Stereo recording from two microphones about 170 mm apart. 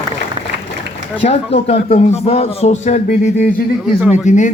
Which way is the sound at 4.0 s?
5° right (ahead or behind).